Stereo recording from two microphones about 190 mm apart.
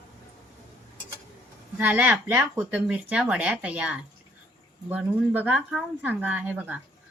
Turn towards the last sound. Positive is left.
turn(degrees=-10)  # may be behind; listen again after turning